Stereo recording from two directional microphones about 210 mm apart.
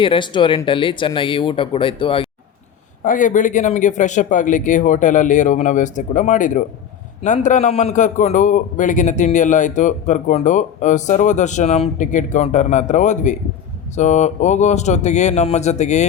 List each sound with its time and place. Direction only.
0.0 s speech: 25° left (ahead or behind)
3.0 s a man's voice: 40° left (ahead or behind)